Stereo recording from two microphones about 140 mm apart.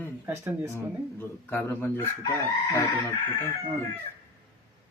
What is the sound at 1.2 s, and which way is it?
Speech, 15° left (ahead or behind).